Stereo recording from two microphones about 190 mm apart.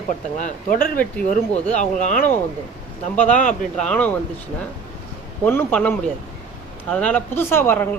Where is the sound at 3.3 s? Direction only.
45° left (ahead or behind).